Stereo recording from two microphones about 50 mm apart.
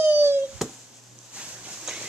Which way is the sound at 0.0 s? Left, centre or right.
Right.